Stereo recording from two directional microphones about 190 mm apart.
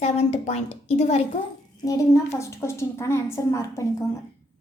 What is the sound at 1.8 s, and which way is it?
A woman's voice, 15° left (ahead or behind).